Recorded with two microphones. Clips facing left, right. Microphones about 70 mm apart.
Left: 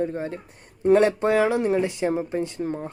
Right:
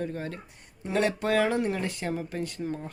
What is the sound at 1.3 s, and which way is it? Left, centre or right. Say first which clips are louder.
Speech: left 5 dB; centre.